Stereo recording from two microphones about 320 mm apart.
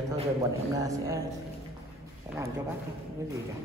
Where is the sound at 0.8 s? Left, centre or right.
Centre.